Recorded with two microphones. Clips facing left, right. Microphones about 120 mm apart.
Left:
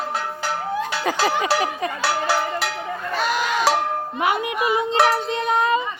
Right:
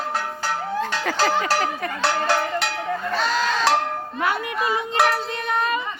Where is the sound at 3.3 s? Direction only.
15° left (ahead or behind).